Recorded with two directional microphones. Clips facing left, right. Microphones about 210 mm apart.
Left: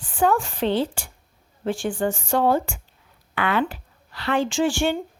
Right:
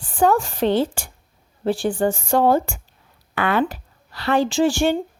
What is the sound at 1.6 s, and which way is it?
Speech, 35° right (ahead or behind).